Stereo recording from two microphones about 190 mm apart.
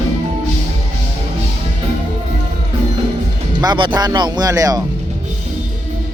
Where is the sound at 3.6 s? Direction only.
25° right (ahead or behind).